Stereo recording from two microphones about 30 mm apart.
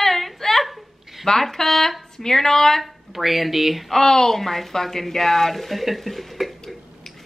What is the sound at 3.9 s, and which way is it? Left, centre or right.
Speech, centre.